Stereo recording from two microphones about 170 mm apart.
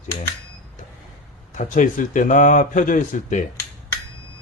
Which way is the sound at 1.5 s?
50° left (ahead or behind).